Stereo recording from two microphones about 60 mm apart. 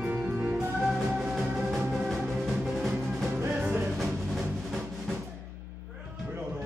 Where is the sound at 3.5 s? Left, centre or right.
Right.